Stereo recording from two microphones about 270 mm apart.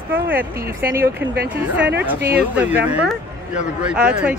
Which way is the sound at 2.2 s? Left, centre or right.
Right.